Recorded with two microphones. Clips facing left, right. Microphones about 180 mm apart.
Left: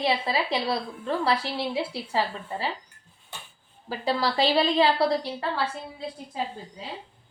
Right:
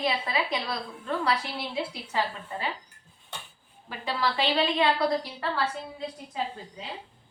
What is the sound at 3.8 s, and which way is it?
A woman's voice, 35° left (ahead or behind).